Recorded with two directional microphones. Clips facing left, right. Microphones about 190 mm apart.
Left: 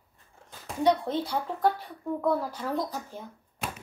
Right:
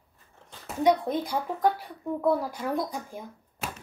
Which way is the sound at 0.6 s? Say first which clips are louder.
Right 1 dB; 15° right (ahead or behind).